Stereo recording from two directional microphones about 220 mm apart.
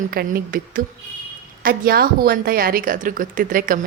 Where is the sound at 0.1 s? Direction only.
45° right (ahead or behind).